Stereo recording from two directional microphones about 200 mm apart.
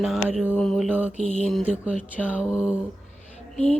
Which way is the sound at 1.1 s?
35° left (ahead or behind).